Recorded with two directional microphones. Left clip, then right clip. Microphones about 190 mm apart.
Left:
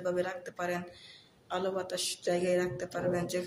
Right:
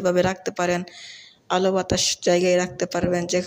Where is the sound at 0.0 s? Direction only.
40° right (ahead or behind).